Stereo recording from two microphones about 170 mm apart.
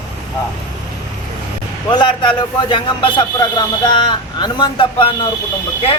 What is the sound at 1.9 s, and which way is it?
A man's voice, 25° left (ahead or behind).